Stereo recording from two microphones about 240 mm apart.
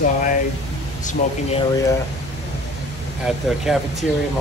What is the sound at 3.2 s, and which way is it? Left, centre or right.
Speech, centre.